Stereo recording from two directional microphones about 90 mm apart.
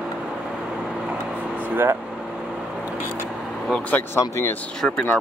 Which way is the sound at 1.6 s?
25° right (ahead or behind).